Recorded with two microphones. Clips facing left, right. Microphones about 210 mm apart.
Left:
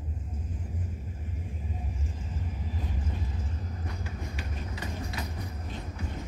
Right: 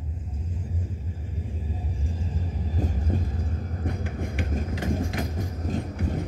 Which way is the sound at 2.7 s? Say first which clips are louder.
Right 10 dB; 40° right (ahead or behind).